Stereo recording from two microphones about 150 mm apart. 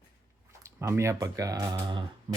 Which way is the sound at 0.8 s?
20° right (ahead or behind).